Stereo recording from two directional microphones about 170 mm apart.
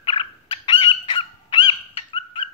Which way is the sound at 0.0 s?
30° left (ahead or behind).